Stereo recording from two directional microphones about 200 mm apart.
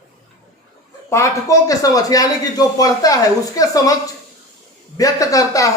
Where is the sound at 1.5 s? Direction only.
15° left (ahead or behind).